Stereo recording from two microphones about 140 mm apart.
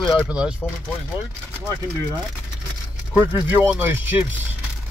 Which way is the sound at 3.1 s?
10° right (ahead or behind).